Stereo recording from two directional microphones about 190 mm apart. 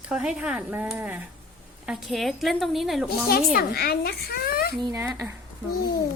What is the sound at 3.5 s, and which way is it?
A child's voice, 50° left (ahead or behind).